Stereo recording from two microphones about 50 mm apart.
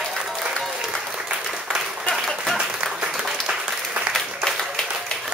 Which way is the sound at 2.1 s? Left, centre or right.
Centre.